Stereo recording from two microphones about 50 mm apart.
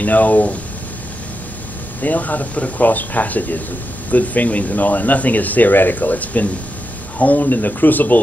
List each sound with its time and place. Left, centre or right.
0.0 s speech: left
2.0 s speech: left